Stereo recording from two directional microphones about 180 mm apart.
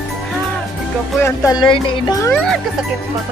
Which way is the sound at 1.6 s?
25° left (ahead or behind).